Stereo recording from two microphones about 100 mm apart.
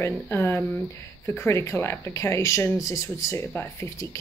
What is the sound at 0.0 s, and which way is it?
Speech, 25° left (ahead or behind).